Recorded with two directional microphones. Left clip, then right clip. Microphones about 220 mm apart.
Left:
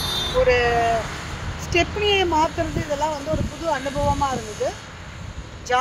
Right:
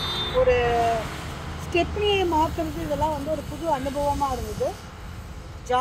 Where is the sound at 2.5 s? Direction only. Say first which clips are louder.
Left 3 dB; 55° right (ahead or behind).